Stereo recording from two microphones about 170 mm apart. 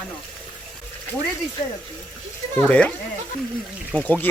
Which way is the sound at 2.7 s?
10° left (ahead or behind).